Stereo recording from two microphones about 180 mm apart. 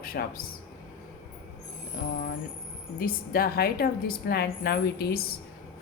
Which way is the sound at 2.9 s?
55° left (ahead or behind).